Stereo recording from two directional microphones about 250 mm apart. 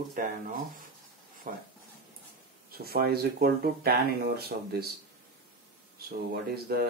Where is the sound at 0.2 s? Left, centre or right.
Right.